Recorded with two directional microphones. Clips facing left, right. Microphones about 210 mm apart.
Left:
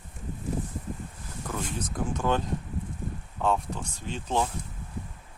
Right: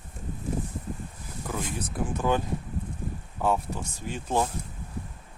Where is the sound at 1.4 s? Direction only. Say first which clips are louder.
Right 1 dB; 10° right (ahead or behind).